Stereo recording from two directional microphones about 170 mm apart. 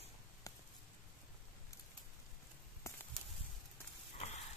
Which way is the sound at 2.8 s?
15° left (ahead or behind).